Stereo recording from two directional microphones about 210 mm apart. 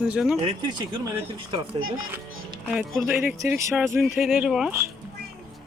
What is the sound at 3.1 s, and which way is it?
Speech, 10° right (ahead or behind).